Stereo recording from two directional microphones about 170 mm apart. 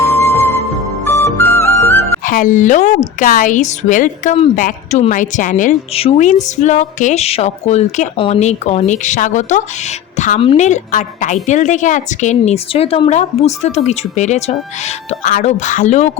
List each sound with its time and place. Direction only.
1.0 s music: 15° left (ahead or behind)
2.2 s a woman's voice: 55° left (ahead or behind)